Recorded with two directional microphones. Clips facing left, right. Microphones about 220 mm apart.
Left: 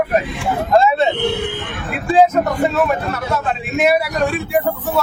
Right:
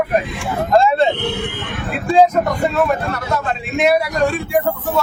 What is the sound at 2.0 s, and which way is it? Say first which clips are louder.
A man's voice: even; 5° left (ahead or behind).